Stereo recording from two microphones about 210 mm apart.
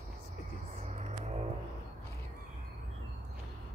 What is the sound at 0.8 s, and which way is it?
Music, 30° right (ahead or behind).